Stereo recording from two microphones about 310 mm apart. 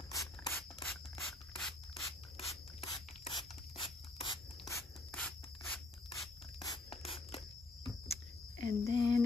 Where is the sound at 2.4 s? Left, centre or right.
Centre.